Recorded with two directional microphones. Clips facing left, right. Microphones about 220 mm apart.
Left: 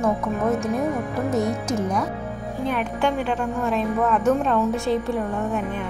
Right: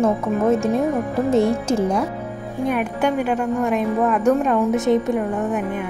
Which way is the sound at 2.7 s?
5° right (ahead or behind).